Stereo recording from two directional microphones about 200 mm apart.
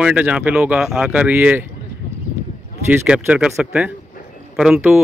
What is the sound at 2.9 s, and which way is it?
Speech, 5° right (ahead or behind).